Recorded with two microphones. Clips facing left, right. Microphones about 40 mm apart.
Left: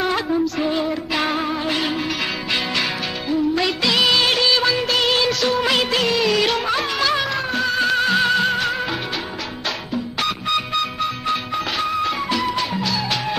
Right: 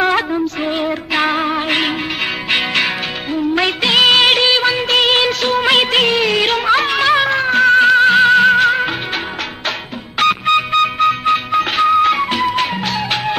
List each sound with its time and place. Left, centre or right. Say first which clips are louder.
0.6 s music: right 2 dB; right
10.1 s music: right 10 dB; right